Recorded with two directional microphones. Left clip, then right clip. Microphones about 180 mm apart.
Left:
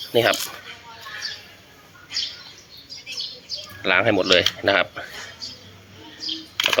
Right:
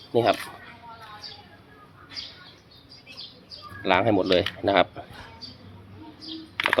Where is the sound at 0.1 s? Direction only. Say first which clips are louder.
Left 3 dB; 5° right (ahead or behind).